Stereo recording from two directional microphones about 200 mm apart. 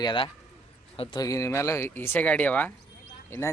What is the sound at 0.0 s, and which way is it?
Speech, 25° left (ahead or behind).